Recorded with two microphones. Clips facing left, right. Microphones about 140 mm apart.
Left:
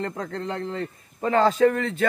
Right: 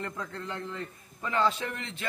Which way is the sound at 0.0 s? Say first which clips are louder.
Left 8 dB; 40° left (ahead or behind).